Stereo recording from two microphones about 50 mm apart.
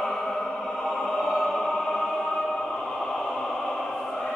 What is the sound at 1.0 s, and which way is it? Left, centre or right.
Music, centre.